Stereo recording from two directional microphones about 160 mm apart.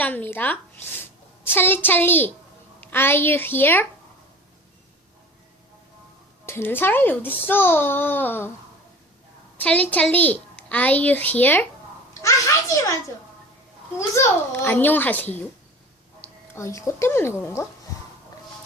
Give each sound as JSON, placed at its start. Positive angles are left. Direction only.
{"t": 0.0, "sound": "a child's voice", "side_deg": 10}
{"t": 6.4, "sound": "a child's voice", "side_deg": 15}
{"t": 9.6, "sound": "a child's voice", "side_deg": 10}
{"t": 14.2, "sound": "a child's voice", "side_deg": 15}
{"t": 16.6, "sound": "a child's voice", "side_deg": 20}